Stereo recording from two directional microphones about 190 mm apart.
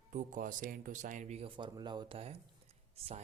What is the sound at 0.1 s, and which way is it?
A man's voice, 40° right (ahead or behind).